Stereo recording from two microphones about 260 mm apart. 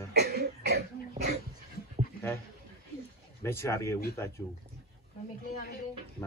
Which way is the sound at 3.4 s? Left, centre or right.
Centre.